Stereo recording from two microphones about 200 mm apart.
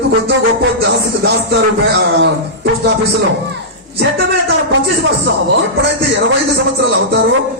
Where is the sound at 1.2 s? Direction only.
55° right (ahead or behind).